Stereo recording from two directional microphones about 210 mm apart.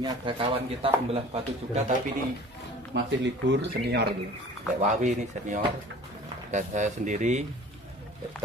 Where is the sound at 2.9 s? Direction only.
55° right (ahead or behind).